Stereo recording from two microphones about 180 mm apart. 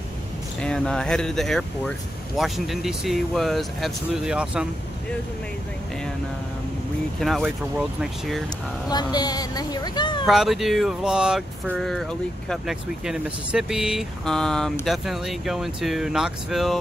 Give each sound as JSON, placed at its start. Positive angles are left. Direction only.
{"t": 0.6, "sound": "speech", "side_deg": 5}
{"t": 7.2, "sound": "speech", "side_deg": 0}
{"t": 8.9, "sound": "a woman's voice", "side_deg": 20}
{"t": 10.2, "sound": "speech", "side_deg": 0}